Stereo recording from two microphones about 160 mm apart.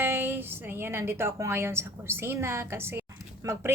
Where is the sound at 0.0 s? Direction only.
10° right (ahead or behind).